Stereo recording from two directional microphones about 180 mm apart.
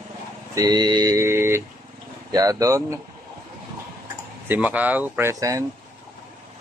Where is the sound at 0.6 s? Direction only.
20° right (ahead or behind).